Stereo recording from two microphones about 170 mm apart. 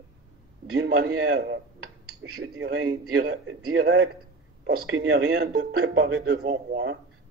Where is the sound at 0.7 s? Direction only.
75° right (ahead or behind).